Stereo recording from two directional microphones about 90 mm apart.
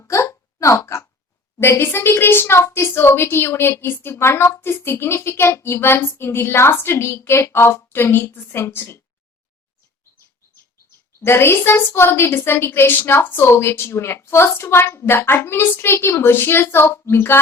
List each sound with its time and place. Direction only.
0.0 s hiccup: 30° left (ahead or behind)
1.5 s a woman's voice: 30° left (ahead or behind)
11.2 s a woman's voice: 25° left (ahead or behind)